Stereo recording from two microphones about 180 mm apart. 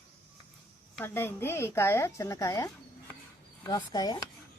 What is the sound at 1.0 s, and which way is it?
A woman's voice, 15° left (ahead or behind).